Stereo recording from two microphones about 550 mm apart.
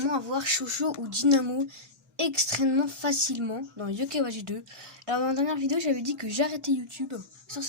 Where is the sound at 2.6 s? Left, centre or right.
Right.